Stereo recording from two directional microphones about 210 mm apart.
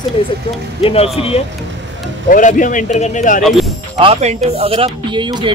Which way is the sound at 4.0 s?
30° right (ahead or behind).